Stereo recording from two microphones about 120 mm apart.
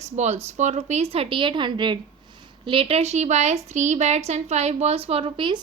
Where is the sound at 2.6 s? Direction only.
50° right (ahead or behind).